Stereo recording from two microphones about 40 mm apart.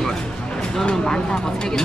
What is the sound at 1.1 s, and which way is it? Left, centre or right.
Speech, left.